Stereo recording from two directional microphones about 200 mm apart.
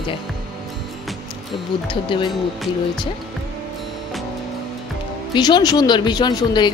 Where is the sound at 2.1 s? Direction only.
25° left (ahead or behind).